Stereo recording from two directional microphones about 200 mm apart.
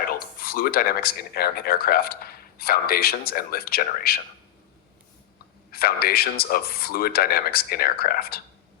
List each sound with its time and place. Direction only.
0.3 s speech: 45° left (ahead or behind)
5.7 s a man's voice: 50° left (ahead or behind)